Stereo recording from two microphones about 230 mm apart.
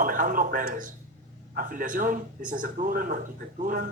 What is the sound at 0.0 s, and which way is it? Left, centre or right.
A man's voice, right.